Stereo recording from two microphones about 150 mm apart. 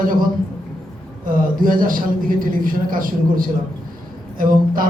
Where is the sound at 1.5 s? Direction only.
70° right (ahead or behind).